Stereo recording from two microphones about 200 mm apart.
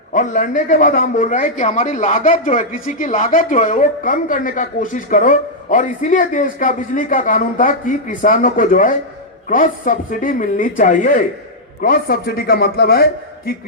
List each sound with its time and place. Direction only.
0.1 s a man's voice: 40° left (ahead or behind)